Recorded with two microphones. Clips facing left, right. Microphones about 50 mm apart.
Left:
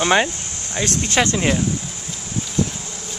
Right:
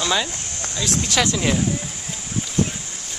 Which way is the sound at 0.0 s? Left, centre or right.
Left.